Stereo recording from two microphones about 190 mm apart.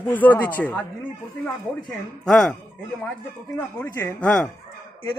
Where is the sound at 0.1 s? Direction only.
10° left (ahead or behind).